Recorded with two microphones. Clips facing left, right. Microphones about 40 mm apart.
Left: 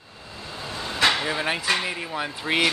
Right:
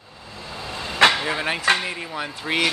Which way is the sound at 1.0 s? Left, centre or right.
Right.